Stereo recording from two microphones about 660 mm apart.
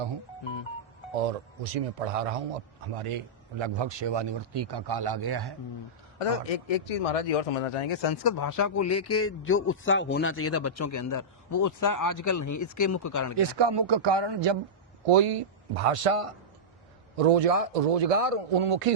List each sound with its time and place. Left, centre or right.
1.1 s a man's voice: right
6.1 s speech: left
13.3 s a man's voice: right
15.0 s a man's voice: right